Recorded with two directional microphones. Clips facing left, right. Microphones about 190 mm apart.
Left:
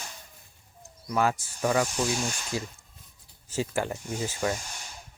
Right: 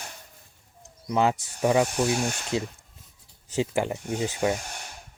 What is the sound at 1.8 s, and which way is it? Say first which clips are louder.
Speech: right 4 dB; 60° right (ahead or behind).